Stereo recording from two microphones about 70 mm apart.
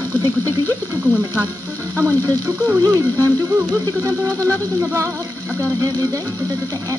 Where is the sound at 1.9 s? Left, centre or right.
Right.